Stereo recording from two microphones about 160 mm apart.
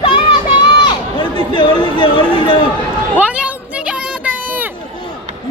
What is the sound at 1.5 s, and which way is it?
Speech, 25° left (ahead or behind).